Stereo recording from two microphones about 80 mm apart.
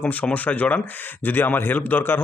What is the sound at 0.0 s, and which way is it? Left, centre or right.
Speech, centre.